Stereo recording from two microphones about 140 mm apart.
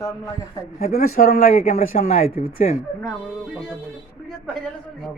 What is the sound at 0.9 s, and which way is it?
Speech, 90° left.